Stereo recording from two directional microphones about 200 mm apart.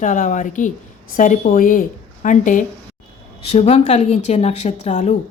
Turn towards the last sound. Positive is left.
turn(degrees=35)  # may be behind; listen again after turning